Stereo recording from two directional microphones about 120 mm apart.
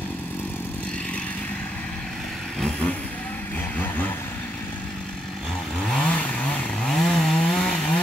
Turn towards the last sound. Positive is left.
turn(degrees=10)  # may be behind; listen again after turning